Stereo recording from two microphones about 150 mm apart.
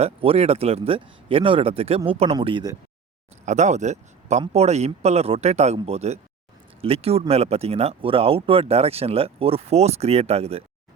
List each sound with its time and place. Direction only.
0.0 s speech: 40° right (ahead or behind)
3.4 s speech: 50° right (ahead or behind)